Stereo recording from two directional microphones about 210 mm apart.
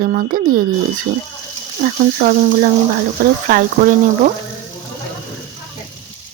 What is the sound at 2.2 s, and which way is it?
Speech, 45° right (ahead or behind).